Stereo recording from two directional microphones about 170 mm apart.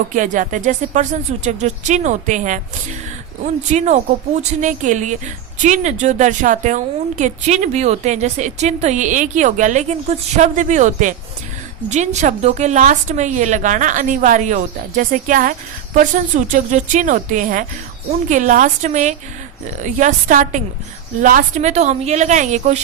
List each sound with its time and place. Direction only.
0.1 s a woman's voice: 50° right (ahead or behind)